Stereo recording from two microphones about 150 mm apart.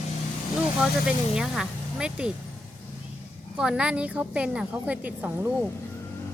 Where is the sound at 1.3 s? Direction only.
5° right (ahead or behind).